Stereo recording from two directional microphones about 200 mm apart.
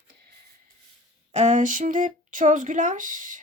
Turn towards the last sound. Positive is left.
turn(degrees=-40)  # may be behind; listen again after turning